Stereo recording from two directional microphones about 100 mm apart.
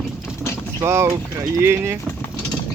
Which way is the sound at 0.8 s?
25° right (ahead or behind).